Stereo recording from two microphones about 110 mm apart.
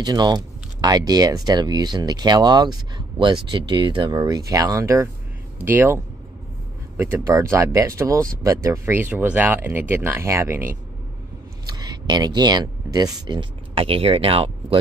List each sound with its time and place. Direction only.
0.0 s speech: 40° right (ahead or behind)
4.2 s speech: 30° right (ahead or behind)
7.5 s speech: 30° right (ahead or behind)
11.6 s a sound: 40° right (ahead or behind)
13.3 s speech: 55° right (ahead or behind)